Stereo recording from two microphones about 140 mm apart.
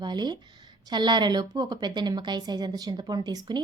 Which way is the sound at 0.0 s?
30° right (ahead or behind).